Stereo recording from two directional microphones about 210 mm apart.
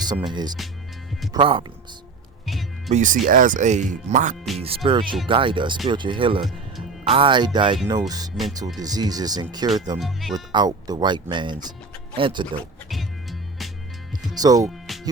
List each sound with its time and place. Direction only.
0.0 s speech: 20° right (ahead or behind)
1.3 s speech: 25° right (ahead or behind)
2.5 s music: centre (ahead or behind)
2.9 s speech: 35° right (ahead or behind)
4.6 s speech: 25° right (ahead or behind)
10.0 s speech: centre (ahead or behind)
10.3 s speech: 20° right (ahead or behind)
14.3 s speech: 15° right (ahead or behind)
14.9 s music: centre (ahead or behind)